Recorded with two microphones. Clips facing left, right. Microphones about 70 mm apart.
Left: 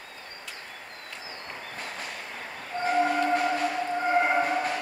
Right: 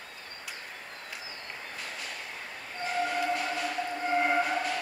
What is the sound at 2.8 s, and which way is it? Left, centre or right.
Train, left.